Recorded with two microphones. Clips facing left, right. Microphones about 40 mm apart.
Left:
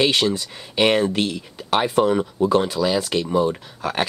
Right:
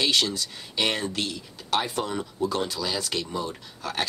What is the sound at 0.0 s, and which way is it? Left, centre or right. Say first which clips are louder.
Speech: left 5 dB; left.